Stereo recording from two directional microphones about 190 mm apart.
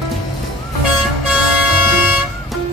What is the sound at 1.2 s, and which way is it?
Vehicle, 5° right (ahead or behind).